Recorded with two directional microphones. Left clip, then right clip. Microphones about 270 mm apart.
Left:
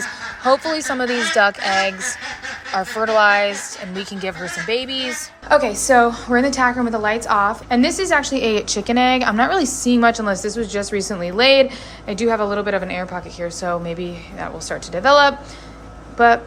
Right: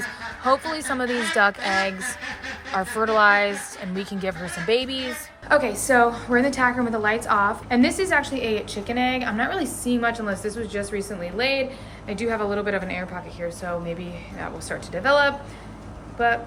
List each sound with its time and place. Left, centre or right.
0.4 s a woman's voice: centre
5.5 s a woman's voice: centre